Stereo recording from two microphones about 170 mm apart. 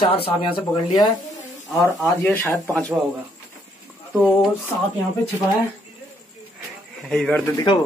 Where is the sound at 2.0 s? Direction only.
10° left (ahead or behind).